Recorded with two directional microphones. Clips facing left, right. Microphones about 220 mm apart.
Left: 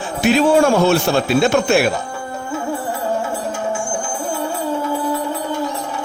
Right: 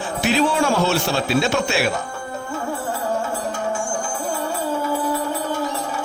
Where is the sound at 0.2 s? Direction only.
50° left (ahead or behind).